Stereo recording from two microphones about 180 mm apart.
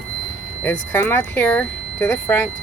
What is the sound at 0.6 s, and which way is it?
Speech, 15° left (ahead or behind).